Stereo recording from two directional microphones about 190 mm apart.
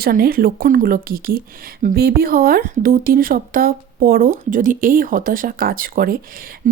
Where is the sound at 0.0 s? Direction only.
50° right (ahead or behind).